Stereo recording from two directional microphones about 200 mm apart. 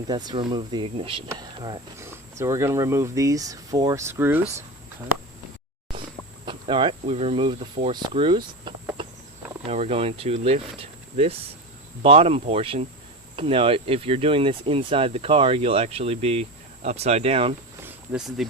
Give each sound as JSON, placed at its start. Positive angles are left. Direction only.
{"t": 0.1, "sound": "speech", "side_deg": -20}
{"t": 6.4, "sound": "speech", "side_deg": -25}
{"t": 9.0, "sound": "a sound", "side_deg": -25}
{"t": 9.6, "sound": "speech", "side_deg": -30}
{"t": 12.0, "sound": "speech", "side_deg": -30}
{"t": 18.4, "sound": "speech", "side_deg": 0}